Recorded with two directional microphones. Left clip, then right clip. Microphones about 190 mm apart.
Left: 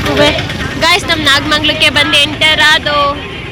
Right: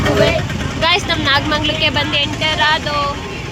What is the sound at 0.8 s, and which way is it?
Speech, 10° left (ahead or behind).